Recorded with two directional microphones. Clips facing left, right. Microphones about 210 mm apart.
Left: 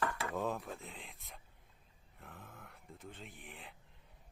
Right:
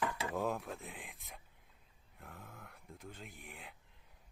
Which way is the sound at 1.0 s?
15° right (ahead or behind).